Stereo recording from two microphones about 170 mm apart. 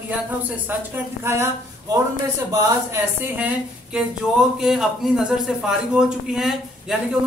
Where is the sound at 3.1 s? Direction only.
10° right (ahead or behind).